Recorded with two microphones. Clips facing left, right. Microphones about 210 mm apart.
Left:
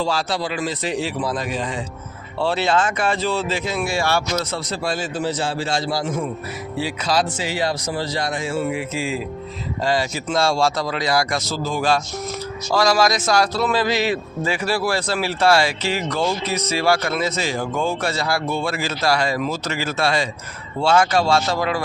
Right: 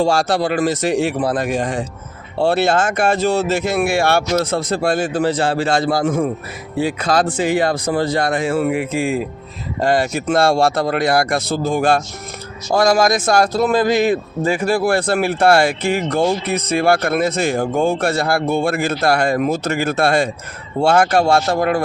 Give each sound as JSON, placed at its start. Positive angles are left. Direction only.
{"t": 0.0, "sound": "speech", "side_deg": -50}